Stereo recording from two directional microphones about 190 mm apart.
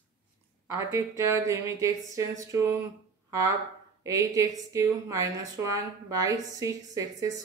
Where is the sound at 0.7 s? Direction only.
15° right (ahead or behind).